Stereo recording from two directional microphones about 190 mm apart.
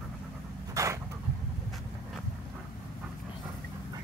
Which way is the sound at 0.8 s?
15° right (ahead or behind).